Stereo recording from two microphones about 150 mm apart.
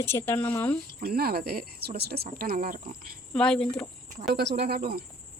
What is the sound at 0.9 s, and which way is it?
Speech, 90° right.